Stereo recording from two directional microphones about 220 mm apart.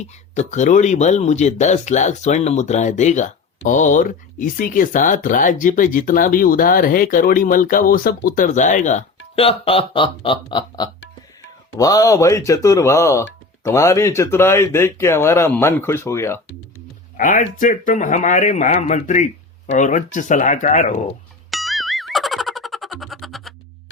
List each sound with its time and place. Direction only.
0.3 s speech: 35° left (ahead or behind); by 16.4 s 10° left (ahead or behind)
17.2 s speech: 35° left (ahead or behind)
21.5 s music: centre (ahead or behind)